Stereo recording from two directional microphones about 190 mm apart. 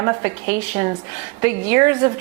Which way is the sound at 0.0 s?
20° right (ahead or behind).